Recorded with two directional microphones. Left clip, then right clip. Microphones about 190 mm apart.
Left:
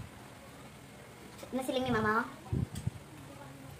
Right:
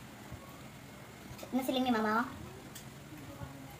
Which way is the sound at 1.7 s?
30° left (ahead or behind).